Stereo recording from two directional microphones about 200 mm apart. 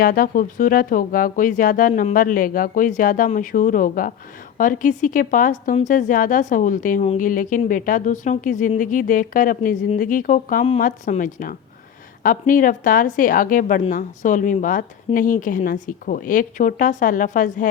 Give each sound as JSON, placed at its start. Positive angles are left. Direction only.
{"t": 0.0, "sound": "a woman's voice", "side_deg": 45}